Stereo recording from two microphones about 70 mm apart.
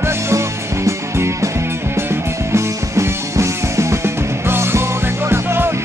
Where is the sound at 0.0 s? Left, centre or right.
Right.